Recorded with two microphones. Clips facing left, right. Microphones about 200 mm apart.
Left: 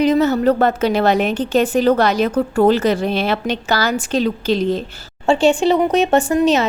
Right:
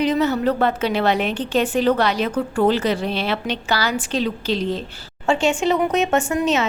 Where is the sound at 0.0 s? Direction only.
45° left (ahead or behind).